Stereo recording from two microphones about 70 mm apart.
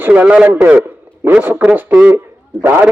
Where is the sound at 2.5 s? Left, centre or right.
Centre.